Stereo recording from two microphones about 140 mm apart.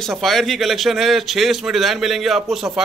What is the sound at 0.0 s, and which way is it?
A man's voice, centre (ahead or behind).